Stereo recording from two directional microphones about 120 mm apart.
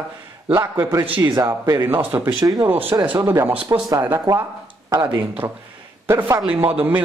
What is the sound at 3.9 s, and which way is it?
A man's voice, 25° right (ahead or behind).